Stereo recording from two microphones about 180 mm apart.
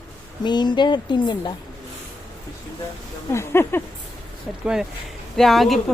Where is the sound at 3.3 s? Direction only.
15° left (ahead or behind).